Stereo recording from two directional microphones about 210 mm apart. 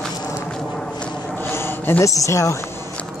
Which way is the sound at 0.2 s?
10° left (ahead or behind).